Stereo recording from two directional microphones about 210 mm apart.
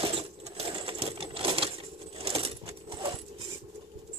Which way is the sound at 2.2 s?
30° right (ahead or behind).